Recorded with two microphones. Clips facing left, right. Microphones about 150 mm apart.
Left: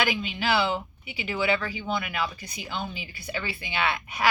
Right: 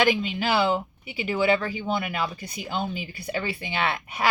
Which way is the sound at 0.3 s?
45° right (ahead or behind).